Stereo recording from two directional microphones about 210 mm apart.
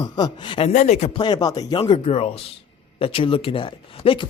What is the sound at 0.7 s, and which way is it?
Speech, 35° left (ahead or behind).